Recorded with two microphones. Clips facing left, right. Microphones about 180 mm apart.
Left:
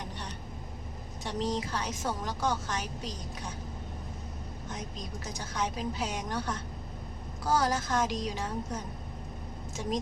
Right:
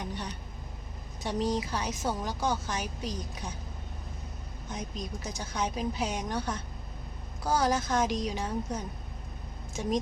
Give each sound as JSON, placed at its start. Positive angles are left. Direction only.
{"t": 1.2, "sound": "a woman's voice", "side_deg": -10}
{"t": 5.2, "sound": "a woman's voice", "side_deg": -15}